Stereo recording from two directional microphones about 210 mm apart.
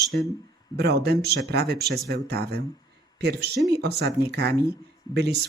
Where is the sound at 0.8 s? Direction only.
50° right (ahead or behind).